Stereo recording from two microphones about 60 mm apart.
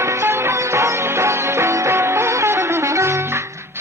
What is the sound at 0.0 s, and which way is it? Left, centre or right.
Music, right.